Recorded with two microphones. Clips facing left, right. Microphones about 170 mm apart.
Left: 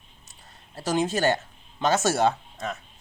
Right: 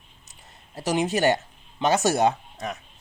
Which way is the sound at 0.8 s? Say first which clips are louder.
Right 1 dB; 15° right (ahead or behind).